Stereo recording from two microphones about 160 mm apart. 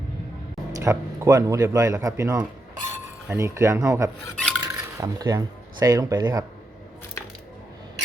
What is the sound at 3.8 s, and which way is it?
Speech, 20° right (ahead or behind).